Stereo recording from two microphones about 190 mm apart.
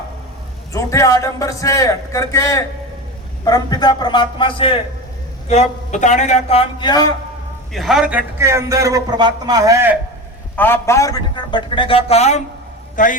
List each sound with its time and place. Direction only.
0.7 s a man's voice: 15° left (ahead or behind)
7.7 s a man's voice: centre (ahead or behind)
10.6 s a man's voice: 15° left (ahead or behind); by 13.1 s 45° left (ahead or behind)